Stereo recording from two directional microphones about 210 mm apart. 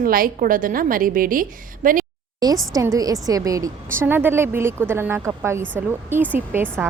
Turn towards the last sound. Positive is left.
turn(degrees=-10)  # may be behind; listen again after turning